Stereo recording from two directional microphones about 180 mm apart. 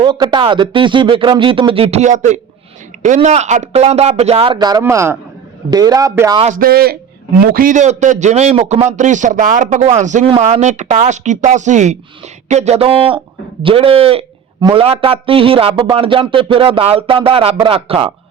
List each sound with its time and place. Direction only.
0.0 s a man's voice: 25° right (ahead or behind)
6.4 s speech: 50° right (ahead or behind); by 18.1 s 30° right (ahead or behind)